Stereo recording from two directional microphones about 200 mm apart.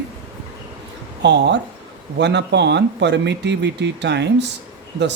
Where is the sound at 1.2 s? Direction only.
60° right (ahead or behind).